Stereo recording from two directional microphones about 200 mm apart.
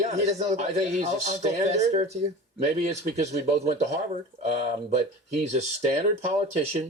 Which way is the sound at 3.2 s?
35° right (ahead or behind).